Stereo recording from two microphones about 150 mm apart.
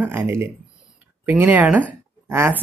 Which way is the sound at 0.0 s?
15° right (ahead or behind).